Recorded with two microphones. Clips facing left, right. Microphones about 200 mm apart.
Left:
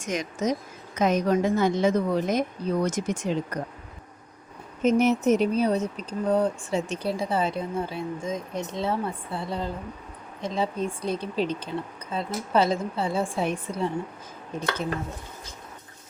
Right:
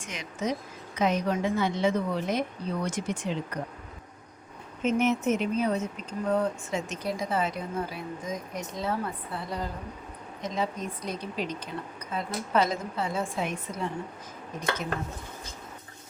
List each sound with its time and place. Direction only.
0.0 s a woman's voice: 45° left (ahead or behind)
4.8 s speech: 40° left (ahead or behind)